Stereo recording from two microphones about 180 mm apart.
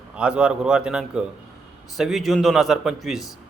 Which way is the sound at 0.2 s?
5° right (ahead or behind).